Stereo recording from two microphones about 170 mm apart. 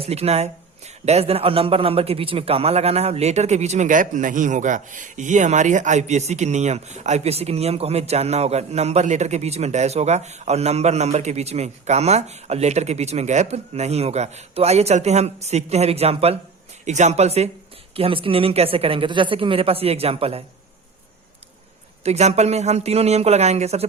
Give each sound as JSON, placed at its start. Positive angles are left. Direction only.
{"t": 0.0, "sound": "a man's voice", "side_deg": -40}
{"t": 22.0, "sound": "a man's voice", "side_deg": -40}